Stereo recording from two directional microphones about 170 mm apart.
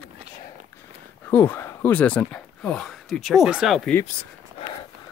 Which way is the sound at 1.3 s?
10° left (ahead or behind).